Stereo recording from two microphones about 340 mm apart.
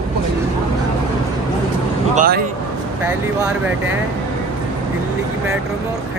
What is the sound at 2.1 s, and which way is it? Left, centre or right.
Speech, right.